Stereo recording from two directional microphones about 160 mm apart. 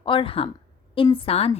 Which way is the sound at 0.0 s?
30° left (ahead or behind).